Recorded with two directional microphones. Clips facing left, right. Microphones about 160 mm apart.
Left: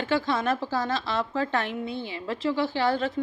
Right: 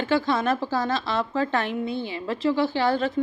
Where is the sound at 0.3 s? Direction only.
40° right (ahead or behind).